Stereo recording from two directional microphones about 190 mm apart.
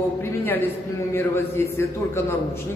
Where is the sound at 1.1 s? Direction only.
15° left (ahead or behind).